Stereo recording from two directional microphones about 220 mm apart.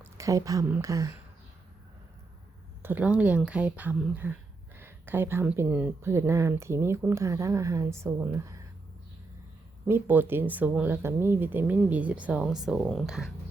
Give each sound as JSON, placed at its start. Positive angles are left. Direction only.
{"t": 0.0, "sound": "a woman's voice", "side_deg": -15}
{"t": 2.8, "sound": "speech", "side_deg": -5}
{"t": 9.8, "sound": "speech", "side_deg": -10}